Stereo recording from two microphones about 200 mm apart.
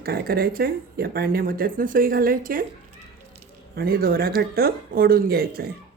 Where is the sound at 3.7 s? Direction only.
50° right (ahead or behind).